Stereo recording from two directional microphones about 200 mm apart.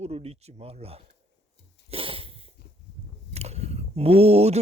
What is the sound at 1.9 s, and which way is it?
Sneeze, 25° right (ahead or behind).